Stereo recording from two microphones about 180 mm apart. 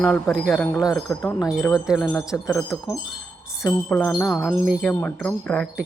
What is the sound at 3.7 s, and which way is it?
Wind chime, 5° left (ahead or behind).